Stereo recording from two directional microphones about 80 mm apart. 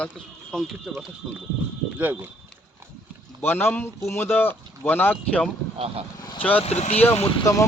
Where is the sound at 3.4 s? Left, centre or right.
Left.